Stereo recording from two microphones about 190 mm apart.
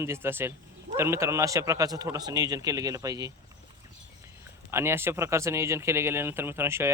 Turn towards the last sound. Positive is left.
turn(degrees=-15)  # may be behind; listen again after turning